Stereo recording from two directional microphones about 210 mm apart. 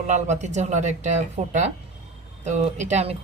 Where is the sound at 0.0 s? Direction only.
35° right (ahead or behind).